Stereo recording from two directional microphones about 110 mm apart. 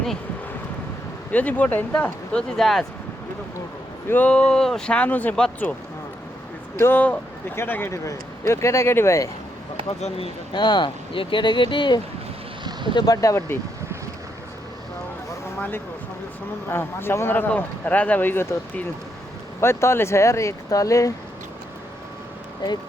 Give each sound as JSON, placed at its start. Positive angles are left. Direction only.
{"t": 1.3, "sound": "speech", "side_deg": 15}
{"t": 4.1, "sound": "speech", "side_deg": 10}
{"t": 6.7, "sound": "speech", "side_deg": 20}
{"t": 10.5, "sound": "speech", "side_deg": 40}
{"t": 13.2, "sound": "speech", "side_deg": 25}
{"t": 16.6, "sound": "speech", "side_deg": 20}
{"t": 19.5, "sound": "speech", "side_deg": 25}